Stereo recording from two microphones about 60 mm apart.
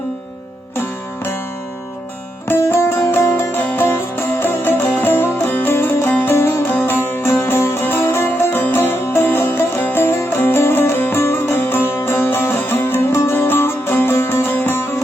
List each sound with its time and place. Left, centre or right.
0.8 s music: left
2.5 s music: left
7.3 s music: left